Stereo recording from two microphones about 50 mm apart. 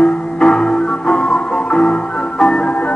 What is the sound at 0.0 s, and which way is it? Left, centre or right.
Music, centre.